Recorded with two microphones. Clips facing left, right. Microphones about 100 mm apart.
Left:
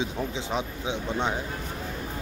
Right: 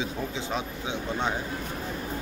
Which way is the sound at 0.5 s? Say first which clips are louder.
Left 3 dB; 20° left (ahead or behind).